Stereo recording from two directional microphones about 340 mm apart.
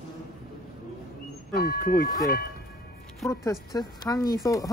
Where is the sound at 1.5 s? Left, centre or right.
Left.